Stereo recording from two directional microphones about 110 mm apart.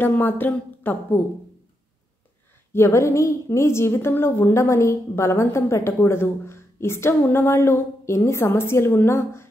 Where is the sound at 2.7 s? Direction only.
25° left (ahead or behind).